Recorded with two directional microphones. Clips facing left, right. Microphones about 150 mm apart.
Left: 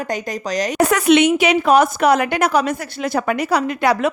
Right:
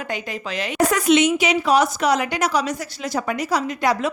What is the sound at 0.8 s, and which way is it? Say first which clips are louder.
A woman's voice: left 3 dB; 65° left (ahead or behind).